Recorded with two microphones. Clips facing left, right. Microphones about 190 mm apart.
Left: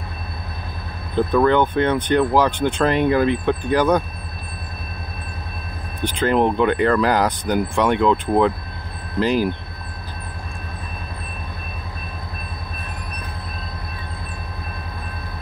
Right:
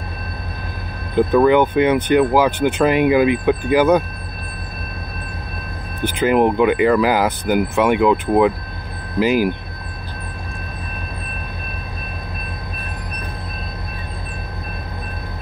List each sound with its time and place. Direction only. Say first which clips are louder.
1.1 s speech: right 3 dB; 10° right (ahead or behind)
6.0 s speech: right 3 dB; 10° right (ahead or behind)